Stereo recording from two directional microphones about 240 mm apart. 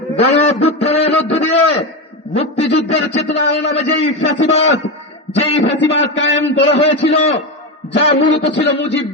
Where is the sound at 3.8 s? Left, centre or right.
Left.